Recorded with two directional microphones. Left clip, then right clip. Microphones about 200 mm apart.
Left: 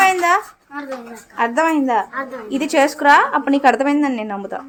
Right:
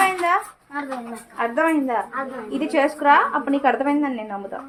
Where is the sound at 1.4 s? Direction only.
55° left (ahead or behind).